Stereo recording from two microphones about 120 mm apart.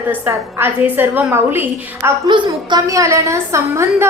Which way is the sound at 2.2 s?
40° right (ahead or behind).